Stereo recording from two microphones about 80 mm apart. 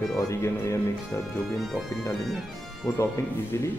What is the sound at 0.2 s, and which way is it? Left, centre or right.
Speech, left.